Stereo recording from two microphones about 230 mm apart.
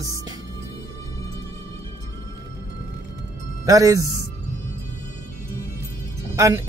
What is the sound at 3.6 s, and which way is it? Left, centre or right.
Speech, centre.